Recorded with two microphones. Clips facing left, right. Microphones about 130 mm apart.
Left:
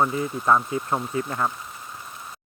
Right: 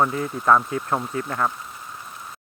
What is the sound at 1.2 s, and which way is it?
Speech, 50° right (ahead or behind).